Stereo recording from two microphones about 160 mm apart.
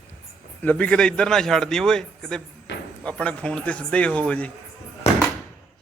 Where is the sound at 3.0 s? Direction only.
10° left (ahead or behind).